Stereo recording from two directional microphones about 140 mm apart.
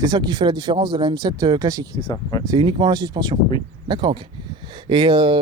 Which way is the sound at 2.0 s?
35° left (ahead or behind).